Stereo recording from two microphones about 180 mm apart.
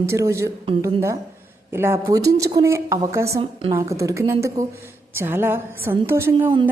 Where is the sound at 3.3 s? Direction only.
30° right (ahead or behind).